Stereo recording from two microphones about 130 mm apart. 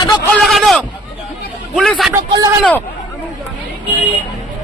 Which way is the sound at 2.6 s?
10° left (ahead or behind).